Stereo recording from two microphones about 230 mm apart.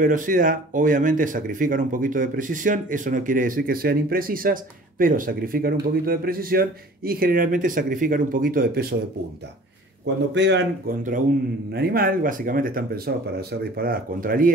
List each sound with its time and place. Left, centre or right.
0.0 s speech: right
10.3 s speech: right